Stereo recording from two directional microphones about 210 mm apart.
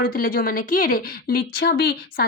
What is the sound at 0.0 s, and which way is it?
A woman's voice, 40° left (ahead or behind).